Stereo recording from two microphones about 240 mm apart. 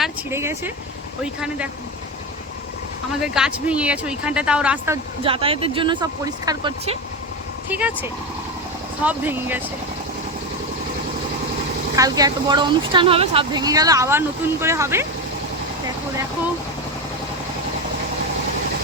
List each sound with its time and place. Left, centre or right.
0.0 s a woman's voice: centre
3.3 s speech: centre
5.2 s speech: right
7.7 s a woman's voice: centre
11.9 s a woman's voice: centre